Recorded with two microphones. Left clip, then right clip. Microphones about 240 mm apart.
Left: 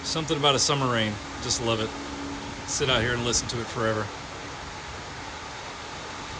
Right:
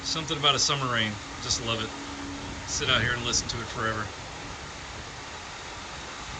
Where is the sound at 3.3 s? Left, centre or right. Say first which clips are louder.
Left 1 dB; left.